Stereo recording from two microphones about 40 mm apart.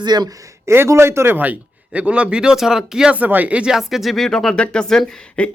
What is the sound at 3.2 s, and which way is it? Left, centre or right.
Speech, right.